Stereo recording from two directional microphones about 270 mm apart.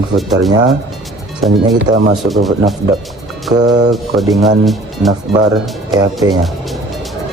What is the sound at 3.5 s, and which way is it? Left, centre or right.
Speech, centre.